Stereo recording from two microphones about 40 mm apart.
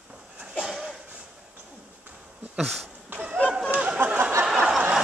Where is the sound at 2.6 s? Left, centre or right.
Centre.